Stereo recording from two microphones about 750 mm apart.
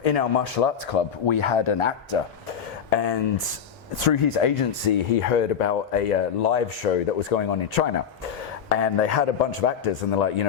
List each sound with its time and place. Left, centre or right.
0.0 s speech: left
2.9 s speech: left
4.0 s speech: left
4.9 s speech: left
5.2 s speech: left